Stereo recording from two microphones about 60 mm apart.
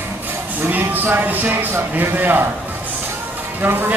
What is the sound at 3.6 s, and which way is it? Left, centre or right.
Speech, right.